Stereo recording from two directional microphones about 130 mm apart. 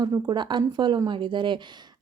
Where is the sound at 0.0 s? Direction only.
30° right (ahead or behind).